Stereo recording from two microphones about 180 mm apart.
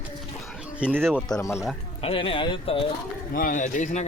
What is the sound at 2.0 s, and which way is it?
Speech, 30° left (ahead or behind).